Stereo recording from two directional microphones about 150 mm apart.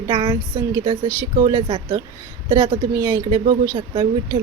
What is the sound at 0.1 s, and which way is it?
Speech, 25° right (ahead or behind).